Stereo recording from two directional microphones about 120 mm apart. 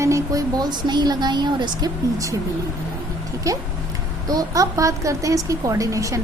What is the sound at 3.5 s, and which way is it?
A woman's voice, 25° right (ahead or behind).